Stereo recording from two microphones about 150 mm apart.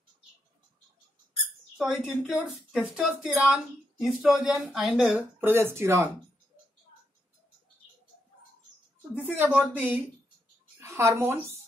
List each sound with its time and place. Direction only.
1.8 s speech: 5° right (ahead or behind)
5.4 s speech: 15° right (ahead or behind)
9.1 s speech: 10° right (ahead or behind)